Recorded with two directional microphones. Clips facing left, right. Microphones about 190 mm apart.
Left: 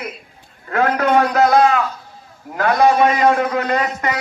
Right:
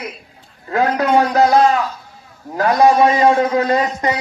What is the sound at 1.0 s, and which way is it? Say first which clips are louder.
Speech: right 1 dB; 35° right (ahead or behind).